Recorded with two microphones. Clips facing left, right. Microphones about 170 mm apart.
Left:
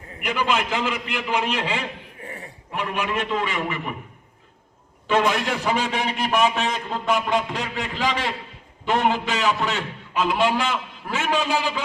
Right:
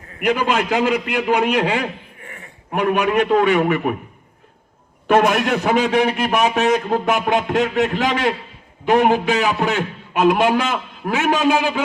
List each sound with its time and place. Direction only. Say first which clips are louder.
0.2 s a man's voice: right 5 dB; 55° right (ahead or behind)
2.2 s a sound: left 4 dB; 35° left (ahead or behind)
2.7 s a man's voice: right 9 dB; 55° right (ahead or behind)
5.0 s a man's voice: right 6 dB; 55° right (ahead or behind)